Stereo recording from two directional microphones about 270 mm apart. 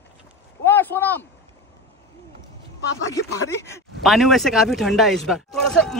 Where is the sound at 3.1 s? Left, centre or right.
Centre.